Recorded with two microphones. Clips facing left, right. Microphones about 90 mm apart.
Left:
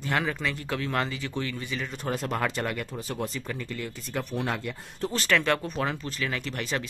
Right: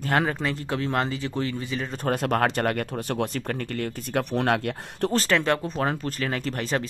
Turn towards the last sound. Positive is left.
turn(degrees=-40)  # may be behind; listen again after turning